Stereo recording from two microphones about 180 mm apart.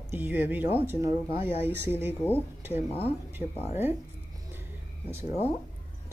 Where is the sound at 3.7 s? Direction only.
10° right (ahead or behind).